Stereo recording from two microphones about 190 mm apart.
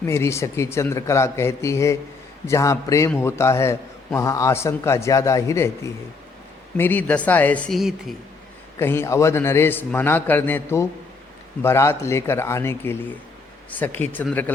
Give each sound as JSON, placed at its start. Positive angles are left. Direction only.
{"t": 0.0, "sound": "a man's voice", "side_deg": 15}
{"t": 8.8, "sound": "a man's voice", "side_deg": 10}